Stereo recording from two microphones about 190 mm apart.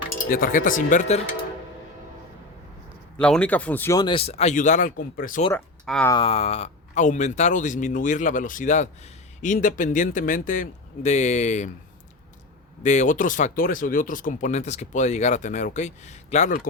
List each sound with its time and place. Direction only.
0.3 s a man's voice: 50° left (ahead or behind)
3.2 s speech: 5° left (ahead or behind); by 5.4 s 45° left (ahead or behind)
5.5 s speech: 5° left (ahead or behind)
6.1 s a man's voice: 25° left (ahead or behind)
12.8 s speech: 40° left (ahead or behind)